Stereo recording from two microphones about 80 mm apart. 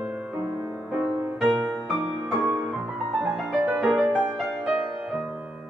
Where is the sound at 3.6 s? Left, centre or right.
Centre.